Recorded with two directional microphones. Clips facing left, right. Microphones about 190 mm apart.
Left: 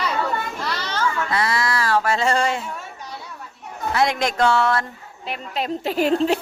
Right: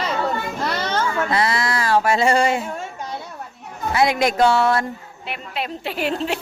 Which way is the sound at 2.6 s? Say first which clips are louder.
Right 4 dB; 45° right (ahead or behind).